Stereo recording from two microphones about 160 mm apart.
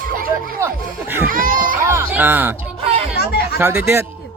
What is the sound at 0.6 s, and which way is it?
Speech, 15° right (ahead or behind).